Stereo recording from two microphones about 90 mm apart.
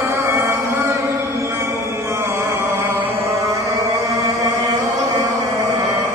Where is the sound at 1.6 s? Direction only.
30° right (ahead or behind).